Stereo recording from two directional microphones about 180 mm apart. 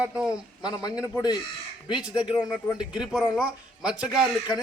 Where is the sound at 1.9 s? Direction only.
5° right (ahead or behind).